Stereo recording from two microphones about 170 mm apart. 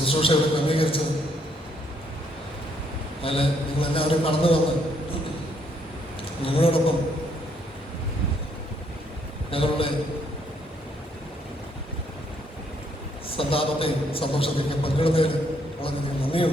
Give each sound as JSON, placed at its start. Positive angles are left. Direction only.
{"t": 0.0, "sound": "a man's voice", "side_deg": 35}
{"t": 3.2, "sound": "a man's voice", "side_deg": 35}
{"t": 6.4, "sound": "a man's voice", "side_deg": 35}
{"t": 9.5, "sound": "a man's voice", "side_deg": 35}
{"t": 13.3, "sound": "a man's voice", "side_deg": 35}